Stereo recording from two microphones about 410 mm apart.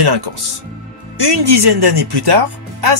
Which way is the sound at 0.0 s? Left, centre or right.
Right.